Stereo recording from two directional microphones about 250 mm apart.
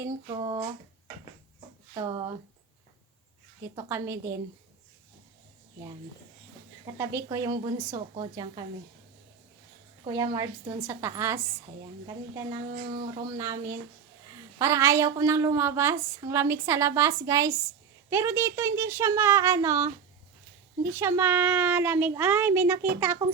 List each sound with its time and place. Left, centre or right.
0.0 s a woman's voice: centre
3.8 s a woman's voice: centre
7.1 s a woman's voice: centre
10.0 s a woman's voice: centre
20.9 s a woman's voice: centre